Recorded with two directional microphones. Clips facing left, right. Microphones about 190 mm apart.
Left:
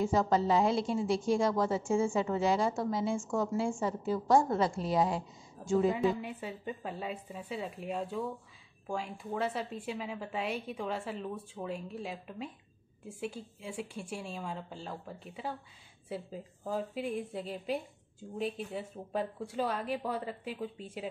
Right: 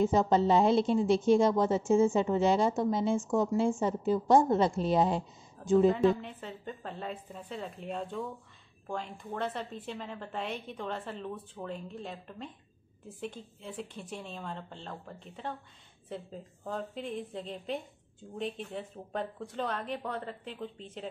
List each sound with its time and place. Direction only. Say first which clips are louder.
0.0 s a woman's voice: right 3 dB; 20° right (ahead or behind)
6.0 s a woman's voice: right 4 dB; 10° left (ahead or behind)